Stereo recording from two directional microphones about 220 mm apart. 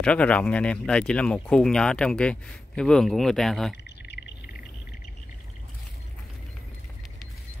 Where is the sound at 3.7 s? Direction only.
50° left (ahead or behind).